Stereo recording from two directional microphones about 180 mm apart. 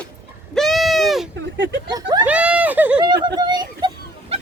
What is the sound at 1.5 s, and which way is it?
Speech, 80° right.